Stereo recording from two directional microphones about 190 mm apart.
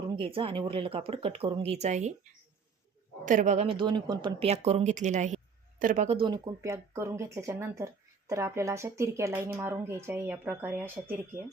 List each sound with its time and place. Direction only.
0.2 s speech: 30° right (ahead or behind)
3.2 s speech: 40° right (ahead or behind); by 11.0 s 10° right (ahead or behind)